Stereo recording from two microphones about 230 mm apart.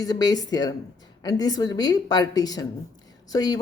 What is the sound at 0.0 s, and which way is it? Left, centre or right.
A woman's voice, centre.